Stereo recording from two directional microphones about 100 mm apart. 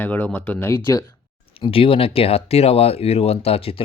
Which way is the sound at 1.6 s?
65° left (ahead or behind).